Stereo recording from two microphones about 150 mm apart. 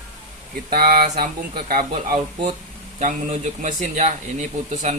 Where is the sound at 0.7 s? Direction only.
70° right (ahead or behind).